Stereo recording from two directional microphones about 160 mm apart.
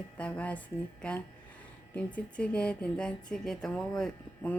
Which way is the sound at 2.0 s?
10° left (ahead or behind).